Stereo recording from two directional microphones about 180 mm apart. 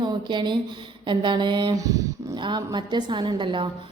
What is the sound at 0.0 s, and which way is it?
A woman's voice, 25° right (ahead or behind).